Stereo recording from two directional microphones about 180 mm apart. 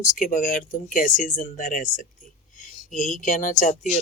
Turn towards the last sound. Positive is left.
turn(degrees=45)  # may be behind; listen again after turning